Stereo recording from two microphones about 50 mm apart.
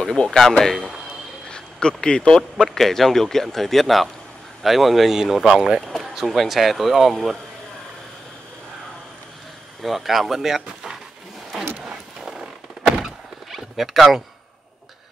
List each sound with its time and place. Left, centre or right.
0.4 s speech: centre
5.8 s speech: centre
9.8 s speech: centre
12.2 s a sound: centre